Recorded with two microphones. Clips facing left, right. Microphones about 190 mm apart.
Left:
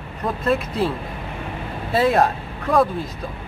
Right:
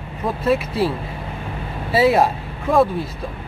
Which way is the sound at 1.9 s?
5° right (ahead or behind).